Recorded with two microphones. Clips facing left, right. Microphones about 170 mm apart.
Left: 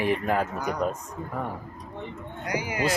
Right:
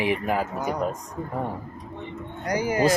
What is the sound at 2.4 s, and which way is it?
Speech, 40° right (ahead or behind).